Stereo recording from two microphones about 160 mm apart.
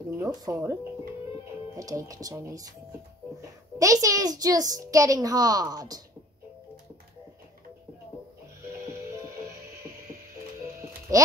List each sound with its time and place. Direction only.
0.2 s speech: 20° right (ahead or behind)
1.8 s a child's voice: 20° right (ahead or behind)
11.1 s a child's voice: 20° right (ahead or behind)